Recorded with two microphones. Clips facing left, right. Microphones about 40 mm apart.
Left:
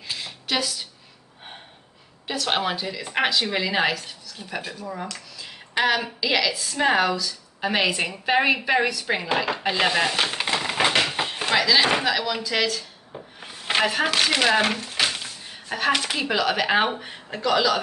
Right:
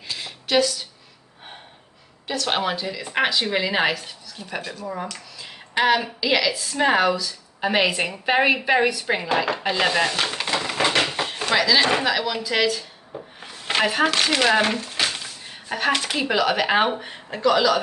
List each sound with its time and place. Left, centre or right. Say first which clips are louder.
0.2 s a sound: right 7 dB; centre
2.2 s speech: right 1 dB; centre
4.4 s speech: right 2 dB; centre
4.8 s speech: right 2 dB; centre
13.4 s speech: even; centre